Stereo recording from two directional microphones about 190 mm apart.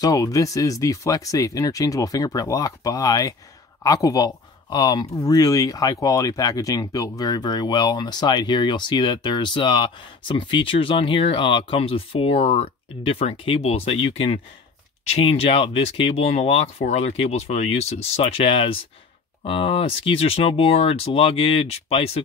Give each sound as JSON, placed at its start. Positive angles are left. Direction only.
{"t": 0.0, "sound": "speech", "side_deg": 15}